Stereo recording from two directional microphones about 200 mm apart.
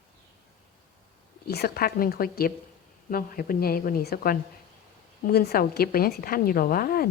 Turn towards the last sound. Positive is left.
turn(degrees=50)  # may be behind; listen again after turning